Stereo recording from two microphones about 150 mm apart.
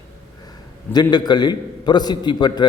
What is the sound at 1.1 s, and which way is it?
A man's voice, 30° left (ahead or behind).